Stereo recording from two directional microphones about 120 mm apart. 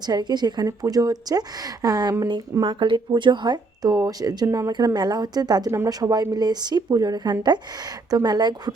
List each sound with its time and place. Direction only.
0.0 s a woman's voice: 35° right (ahead or behind)